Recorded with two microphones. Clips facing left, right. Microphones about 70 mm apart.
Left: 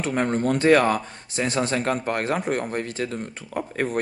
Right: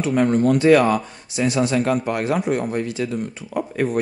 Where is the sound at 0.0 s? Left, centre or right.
Left.